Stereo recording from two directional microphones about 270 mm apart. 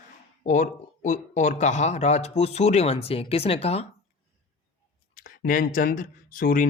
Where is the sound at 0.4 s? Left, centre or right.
Left.